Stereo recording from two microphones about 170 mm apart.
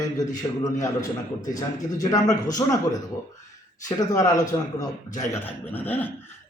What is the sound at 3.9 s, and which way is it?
A man's voice, 20° left (ahead or behind).